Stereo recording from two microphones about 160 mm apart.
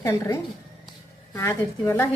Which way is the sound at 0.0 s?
15° left (ahead or behind).